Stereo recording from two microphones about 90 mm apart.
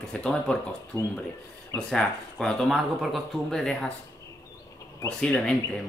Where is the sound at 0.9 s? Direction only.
45° left (ahead or behind).